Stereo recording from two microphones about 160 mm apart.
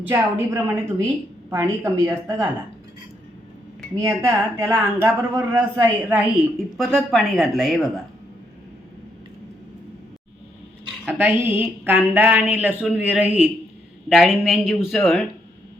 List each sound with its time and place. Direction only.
0.1 s a woman's voice: 15° right (ahead or behind)
4.0 s a woman's voice: 15° right (ahead or behind)
6.7 s speech: 5° left (ahead or behind)
11.2 s a woman's voice: 10° right (ahead or behind)